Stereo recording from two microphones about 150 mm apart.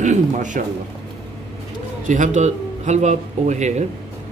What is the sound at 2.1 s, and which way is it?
Speech, 50° right (ahead or behind).